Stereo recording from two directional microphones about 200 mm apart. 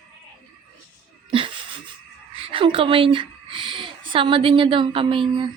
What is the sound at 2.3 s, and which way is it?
Speech, 25° right (ahead or behind).